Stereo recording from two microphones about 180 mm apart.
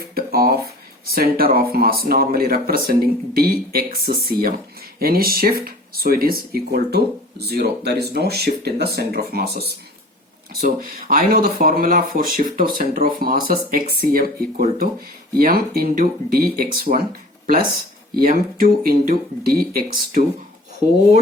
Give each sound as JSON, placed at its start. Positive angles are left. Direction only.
{"t": 0.1, "sound": "a sound", "side_deg": -55}
{"t": 1.1, "sound": "speech", "side_deg": -55}
{"t": 18.2, "sound": "speech", "side_deg": -50}